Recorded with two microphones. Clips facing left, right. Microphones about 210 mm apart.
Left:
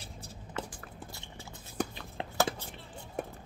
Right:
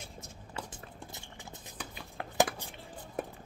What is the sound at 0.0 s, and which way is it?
Walk, 35° left (ahead or behind).